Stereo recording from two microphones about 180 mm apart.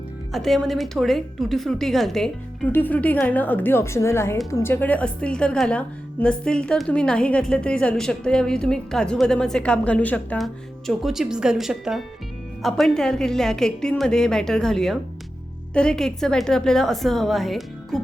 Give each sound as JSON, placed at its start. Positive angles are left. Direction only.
{"t": 0.3, "sound": "a woman's voice", "side_deg": 0}